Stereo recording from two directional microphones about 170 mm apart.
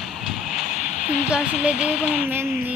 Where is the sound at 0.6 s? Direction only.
45° left (ahead or behind).